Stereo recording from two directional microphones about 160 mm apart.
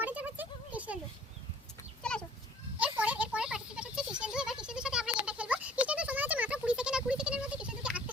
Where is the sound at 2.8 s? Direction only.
10° right (ahead or behind).